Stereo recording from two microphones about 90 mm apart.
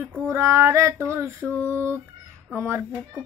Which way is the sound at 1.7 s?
30° right (ahead or behind).